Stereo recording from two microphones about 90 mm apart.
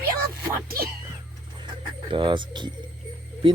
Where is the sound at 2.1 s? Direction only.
65° right (ahead or behind).